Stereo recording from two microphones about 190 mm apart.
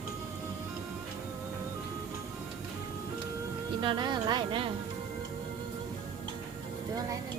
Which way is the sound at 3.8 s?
25° right (ahead or behind).